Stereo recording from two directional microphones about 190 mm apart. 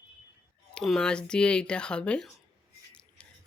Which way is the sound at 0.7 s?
5° left (ahead or behind).